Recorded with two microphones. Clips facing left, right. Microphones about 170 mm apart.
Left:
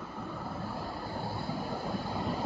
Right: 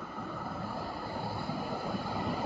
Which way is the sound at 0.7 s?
Centre (ahead or behind).